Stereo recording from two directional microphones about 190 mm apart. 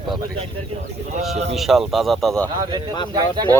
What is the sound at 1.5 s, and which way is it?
Speech, centre (ahead or behind).